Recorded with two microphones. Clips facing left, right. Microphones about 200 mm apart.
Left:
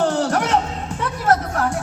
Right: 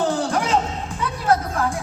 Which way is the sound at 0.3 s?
70° left (ahead or behind).